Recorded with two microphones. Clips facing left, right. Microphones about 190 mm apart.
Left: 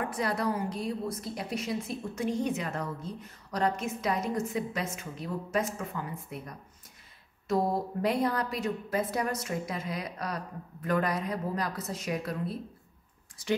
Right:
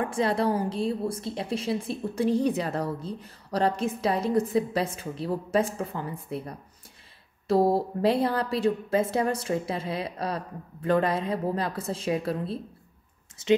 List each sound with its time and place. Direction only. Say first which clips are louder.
0.1 s a woman's voice: right 5 dB; 25° right (ahead or behind)